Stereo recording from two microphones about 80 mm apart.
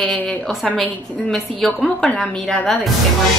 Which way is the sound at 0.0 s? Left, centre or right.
Centre.